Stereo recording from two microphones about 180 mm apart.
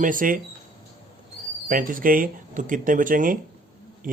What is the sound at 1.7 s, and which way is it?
Speech, 50° right (ahead or behind).